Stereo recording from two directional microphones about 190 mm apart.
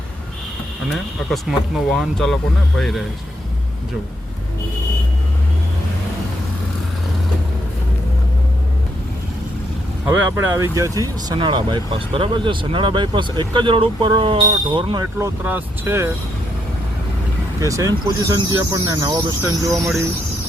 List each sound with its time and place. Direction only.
0.9 s speech: centre (ahead or behind)
10.1 s speech: 15° right (ahead or behind)
15.2 s speech: 10° right (ahead or behind)
17.6 s speech: 15° right (ahead or behind)